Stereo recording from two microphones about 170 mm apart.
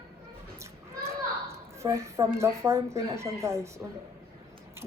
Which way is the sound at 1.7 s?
15° right (ahead or behind).